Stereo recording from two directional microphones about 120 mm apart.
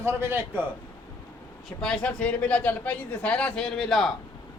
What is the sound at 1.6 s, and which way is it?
A man's voice, 5° left (ahead or behind).